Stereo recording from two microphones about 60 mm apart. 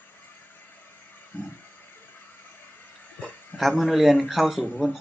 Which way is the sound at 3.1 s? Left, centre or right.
Left.